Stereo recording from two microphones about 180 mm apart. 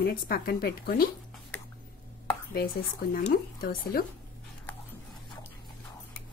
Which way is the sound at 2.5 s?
55° left (ahead or behind).